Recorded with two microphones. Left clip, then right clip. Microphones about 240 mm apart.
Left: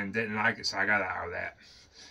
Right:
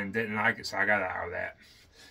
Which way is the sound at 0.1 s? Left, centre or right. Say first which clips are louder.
Right 1 dB; centre.